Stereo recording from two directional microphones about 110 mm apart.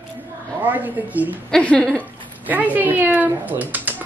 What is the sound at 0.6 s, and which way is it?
Speech, 15° right (ahead or behind).